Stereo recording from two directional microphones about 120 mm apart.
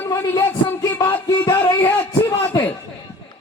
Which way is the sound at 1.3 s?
20° left (ahead or behind).